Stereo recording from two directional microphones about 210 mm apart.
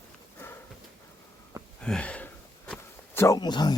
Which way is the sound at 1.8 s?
5° left (ahead or behind).